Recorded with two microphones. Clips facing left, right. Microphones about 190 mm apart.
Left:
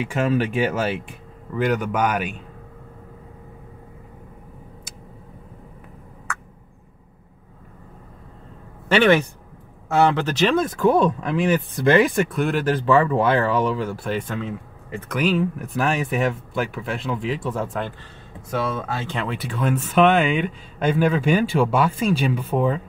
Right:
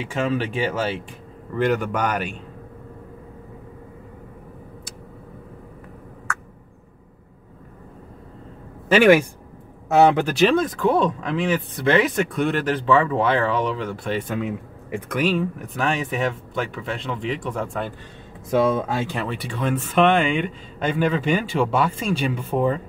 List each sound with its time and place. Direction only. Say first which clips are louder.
0.0 s speech: left 2 dB; 10° left (ahead or behind)
8.8 s speech: right 2 dB; 10° right (ahead or behind)
9.8 s speech: right 3 dB; 20° right (ahead or behind)
10.8 s speech: left 2 dB; 10° left (ahead or behind); by 15.0 s 10° right (ahead or behind)
15.1 s speech: left 1 dB; centre (ahead or behind)
18.6 s speech: right 6 dB; 20° right (ahead or behind)
19.0 s speech: even; 5° right (ahead or behind)